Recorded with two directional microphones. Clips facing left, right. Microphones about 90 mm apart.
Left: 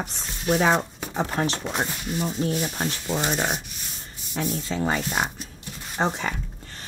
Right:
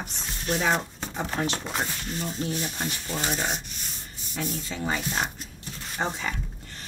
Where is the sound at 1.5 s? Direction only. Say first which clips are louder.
Left 3 dB; centre (ahead or behind).